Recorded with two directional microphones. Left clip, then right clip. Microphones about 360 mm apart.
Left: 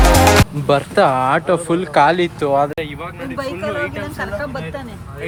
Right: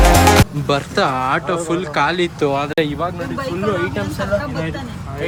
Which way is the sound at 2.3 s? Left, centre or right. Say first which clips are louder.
Left 2 dB; centre.